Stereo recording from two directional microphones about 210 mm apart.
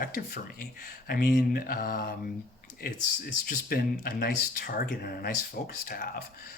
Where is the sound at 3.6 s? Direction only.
45° left (ahead or behind).